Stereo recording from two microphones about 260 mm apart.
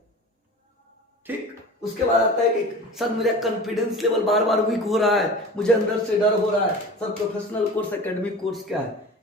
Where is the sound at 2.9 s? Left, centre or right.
Centre.